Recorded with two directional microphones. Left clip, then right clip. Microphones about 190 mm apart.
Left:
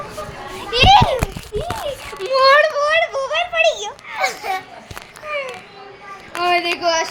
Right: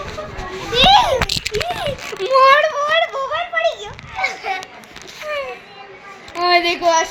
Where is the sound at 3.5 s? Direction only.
25° left (ahead or behind).